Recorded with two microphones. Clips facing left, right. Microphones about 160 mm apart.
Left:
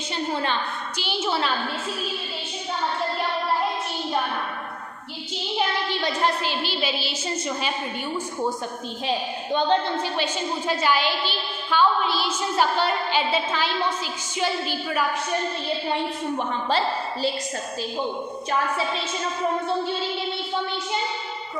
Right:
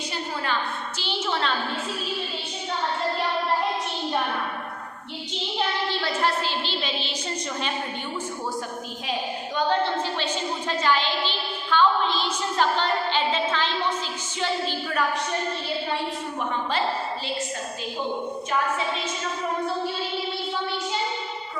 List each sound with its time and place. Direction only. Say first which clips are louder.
0.9 s a woman's voice: left 3 dB; 10° left (ahead or behind)
5.5 s a woman's voice: left 2 dB; 15° left (ahead or behind)
9.0 s a woman's voice: left 4 dB; 25° left (ahead or behind)
10.7 s a woman's voice: left 1 dB; 10° left (ahead or behind)